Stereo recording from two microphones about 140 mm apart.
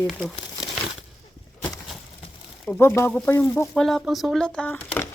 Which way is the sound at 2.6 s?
15° left (ahead or behind).